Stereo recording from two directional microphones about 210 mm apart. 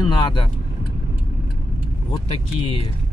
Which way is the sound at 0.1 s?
20° left (ahead or behind).